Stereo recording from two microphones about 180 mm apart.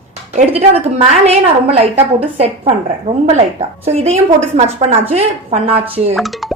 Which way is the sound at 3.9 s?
35° right (ahead or behind).